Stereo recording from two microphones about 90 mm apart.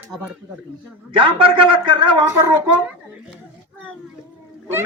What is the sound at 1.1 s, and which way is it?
A man's voice, 75° right (ahead or behind).